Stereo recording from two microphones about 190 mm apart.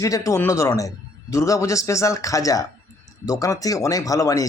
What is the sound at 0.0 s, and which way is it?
Speech, 15° left (ahead or behind).